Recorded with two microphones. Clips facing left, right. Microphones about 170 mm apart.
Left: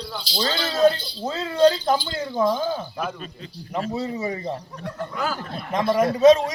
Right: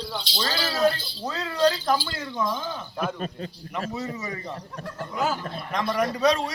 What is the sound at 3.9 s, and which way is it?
Speech, 30° left (ahead or behind).